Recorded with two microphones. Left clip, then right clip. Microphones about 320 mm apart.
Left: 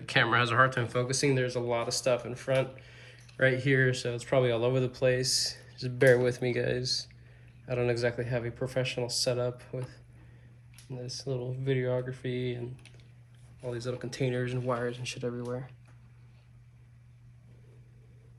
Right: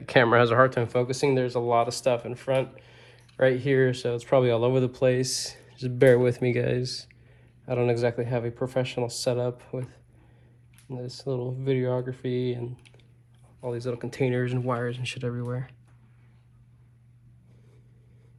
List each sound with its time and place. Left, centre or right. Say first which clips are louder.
0.0 s speech: right 6 dB; centre
10.8 s speech: right 3 dB; right
11.6 s speech: right 3 dB; centre